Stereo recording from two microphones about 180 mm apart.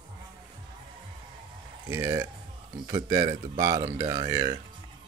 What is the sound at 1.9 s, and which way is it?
Speech, 15° right (ahead or behind).